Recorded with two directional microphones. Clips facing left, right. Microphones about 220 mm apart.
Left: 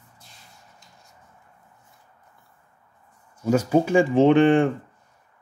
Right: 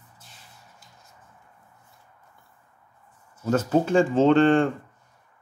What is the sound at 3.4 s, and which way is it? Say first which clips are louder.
Speech: left 2 dB; 10° left (ahead or behind).